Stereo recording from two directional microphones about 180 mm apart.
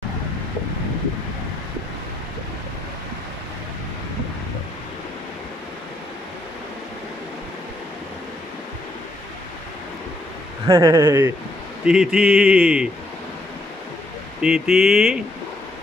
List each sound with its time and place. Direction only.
10.7 s speech: 15° right (ahead or behind)
11.8 s speech: 5° right (ahead or behind)
14.4 s speech: centre (ahead or behind)